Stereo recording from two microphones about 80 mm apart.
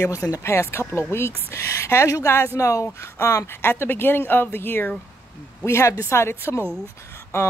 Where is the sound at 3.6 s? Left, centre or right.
Left.